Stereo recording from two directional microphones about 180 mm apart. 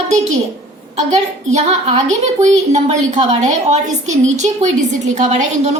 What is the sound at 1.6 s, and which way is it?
A woman's voice, 40° right (ahead or behind).